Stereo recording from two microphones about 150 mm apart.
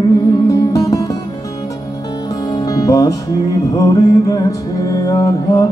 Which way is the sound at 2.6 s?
25° left (ahead or behind).